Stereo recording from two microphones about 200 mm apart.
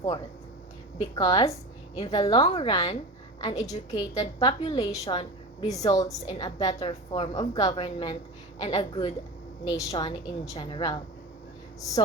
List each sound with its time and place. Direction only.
0.9 s a woman's voice: 20° left (ahead or behind)